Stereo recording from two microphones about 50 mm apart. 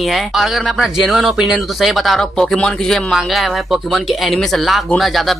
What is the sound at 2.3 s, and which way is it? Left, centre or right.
Speech, centre.